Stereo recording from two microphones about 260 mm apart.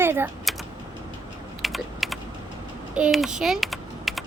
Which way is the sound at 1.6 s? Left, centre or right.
Centre.